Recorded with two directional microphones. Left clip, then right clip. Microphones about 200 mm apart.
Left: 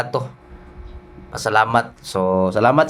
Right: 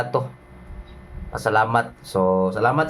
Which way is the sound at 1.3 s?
40° left (ahead or behind).